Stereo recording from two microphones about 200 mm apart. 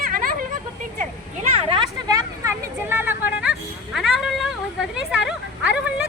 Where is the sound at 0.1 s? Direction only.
45° right (ahead or behind).